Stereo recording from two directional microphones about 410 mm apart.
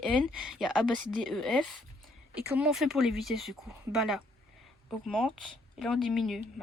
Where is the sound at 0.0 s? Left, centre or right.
Centre.